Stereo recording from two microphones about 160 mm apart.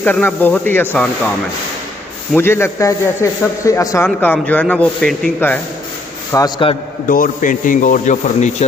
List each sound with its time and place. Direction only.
0.0 s a man's voice: 10° left (ahead or behind)
2.3 s a man's voice: 15° left (ahead or behind)
6.3 s a man's voice: 20° left (ahead or behind)
7.1 s a man's voice: 60° left (ahead or behind)